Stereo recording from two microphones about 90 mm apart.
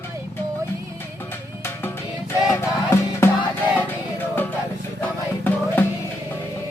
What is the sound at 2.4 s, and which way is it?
Music, 35° left (ahead or behind).